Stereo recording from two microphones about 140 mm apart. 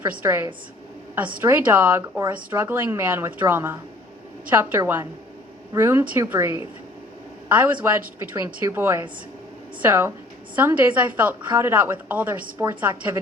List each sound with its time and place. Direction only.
0.2 s a woman's voice: 15° right (ahead or behind)